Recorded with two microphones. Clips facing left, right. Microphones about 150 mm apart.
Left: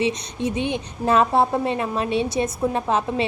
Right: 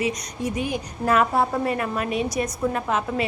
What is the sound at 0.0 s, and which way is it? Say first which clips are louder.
A woman's voice: left 3 dB; 25° left (ahead or behind).